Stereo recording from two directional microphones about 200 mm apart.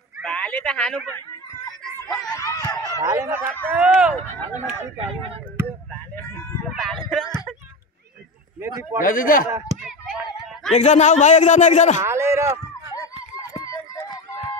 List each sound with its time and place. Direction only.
0.2 s a woman's voice: 5° left (ahead or behind)
2.3 s a sound: 15° left (ahead or behind)
2.9 s speech: 15° right (ahead or behind)
4.9 s speech: 30° right (ahead or behind)
6.7 s a sound: centre (ahead or behind)
8.5 s speech: 10° right (ahead or behind)
9.0 s a man's voice: 45° left (ahead or behind)
9.8 s a sound: 5° right (ahead or behind)
10.7 s a man's voice: 35° left (ahead or behind)
12.0 s speech: 15° right (ahead or behind)
13.4 s run: 15° left (ahead or behind)